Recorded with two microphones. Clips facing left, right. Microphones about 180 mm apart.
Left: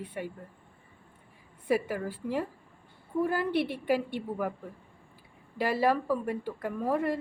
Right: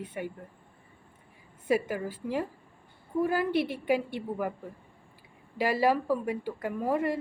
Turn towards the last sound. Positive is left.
turn(degrees=0)  # may be behind; listen again after turning